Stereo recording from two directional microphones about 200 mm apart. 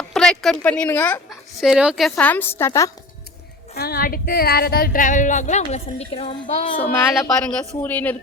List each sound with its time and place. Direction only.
0.1 s speech: centre (ahead or behind)
1.3 s a woman's voice: centre (ahead or behind); by 2.9 s 15° left (ahead or behind)
3.8 s speech: 50° left (ahead or behind); by 6.7 s 30° left (ahead or behind)
6.7 s a woman's voice: 5° left (ahead or behind)